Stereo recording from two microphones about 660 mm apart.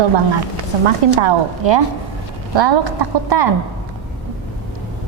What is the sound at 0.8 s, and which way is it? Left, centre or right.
A woman's voice, right.